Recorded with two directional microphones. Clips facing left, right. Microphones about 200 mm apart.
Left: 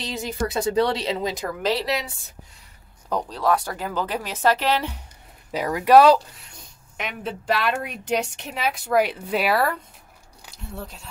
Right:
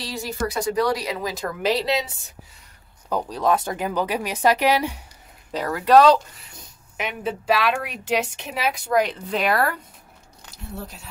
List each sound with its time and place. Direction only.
0.0 s speech: 20° left (ahead or behind)
3.1 s speech: 5° right (ahead or behind)
3.3 s speech: 20° right (ahead or behind)
5.5 s a woman's voice: 15° left (ahead or behind)
10.8 s a woman's voice: 5° right (ahead or behind)